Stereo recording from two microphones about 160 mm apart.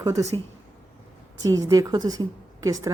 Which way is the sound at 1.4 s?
20° right (ahead or behind).